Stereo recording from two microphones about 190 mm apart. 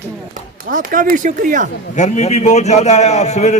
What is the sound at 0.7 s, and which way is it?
Speech, 45° right (ahead or behind).